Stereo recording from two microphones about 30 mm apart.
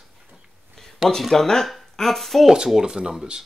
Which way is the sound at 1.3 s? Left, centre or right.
Centre.